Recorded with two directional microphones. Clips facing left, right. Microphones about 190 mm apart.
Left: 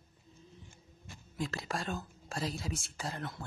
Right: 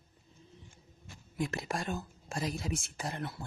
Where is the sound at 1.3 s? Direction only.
15° right (ahead or behind).